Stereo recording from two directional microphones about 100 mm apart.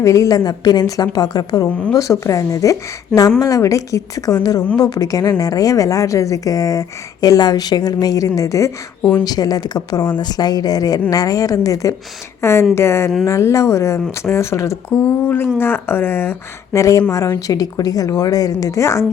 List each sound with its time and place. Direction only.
0.0 s a woman's voice: 30° left (ahead or behind)
14.9 s a woman's voice: 20° left (ahead or behind)